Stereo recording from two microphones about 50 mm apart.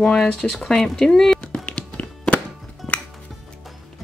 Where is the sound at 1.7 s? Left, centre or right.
Left.